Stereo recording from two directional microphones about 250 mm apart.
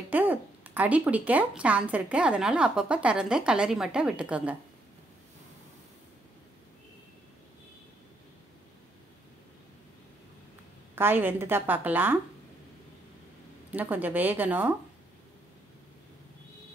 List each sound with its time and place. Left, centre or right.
0.1 s a woman's voice: centre
11.0 s a woman's voice: centre
13.7 s a woman's voice: centre